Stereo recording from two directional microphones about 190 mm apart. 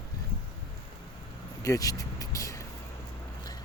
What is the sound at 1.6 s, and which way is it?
Vehicle, 15° left (ahead or behind).